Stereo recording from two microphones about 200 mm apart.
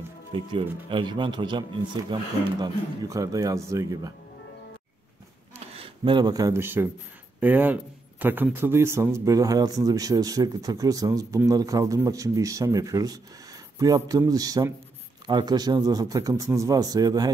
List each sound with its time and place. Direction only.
0.3 s a man's voice: 25° right (ahead or behind)
5.8 s a man's voice: 25° right (ahead or behind)